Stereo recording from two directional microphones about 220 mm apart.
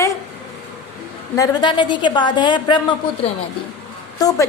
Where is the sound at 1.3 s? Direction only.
20° left (ahead or behind).